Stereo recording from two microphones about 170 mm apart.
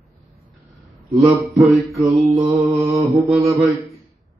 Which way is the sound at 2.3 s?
20° right (ahead or behind).